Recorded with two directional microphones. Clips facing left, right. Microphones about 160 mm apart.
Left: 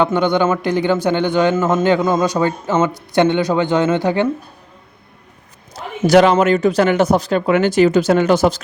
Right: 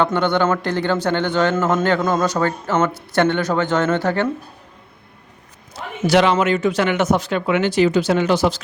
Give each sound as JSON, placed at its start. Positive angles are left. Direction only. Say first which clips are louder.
{"t": 0.0, "sound": "a man's voice", "louder": "left 2 dB", "side_deg": 15}
{"t": 5.7, "sound": "a man's voice", "louder": "left 5 dB", "side_deg": 45}